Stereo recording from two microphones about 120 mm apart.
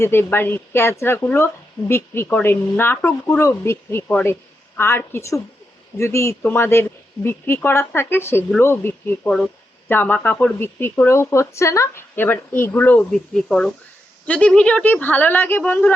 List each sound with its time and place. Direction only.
0.0 s speech: 20° left (ahead or behind)
13.1 s speech: 5° left (ahead or behind)